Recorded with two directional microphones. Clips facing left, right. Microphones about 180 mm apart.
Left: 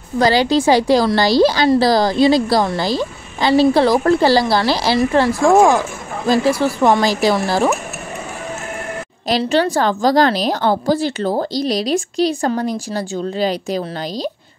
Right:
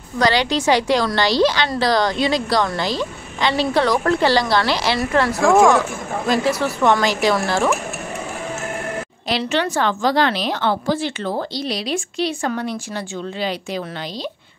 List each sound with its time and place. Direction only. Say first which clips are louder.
0.2 s a woman's voice: left 4 dB; 35° left (ahead or behind)
3.0 s a sound: left 2 dB; 35° left (ahead or behind)
3.7 s a woman's voice: left 4 dB; 30° left (ahead or behind)
9.3 s a woman's voice: left 5 dB; 35° left (ahead or behind)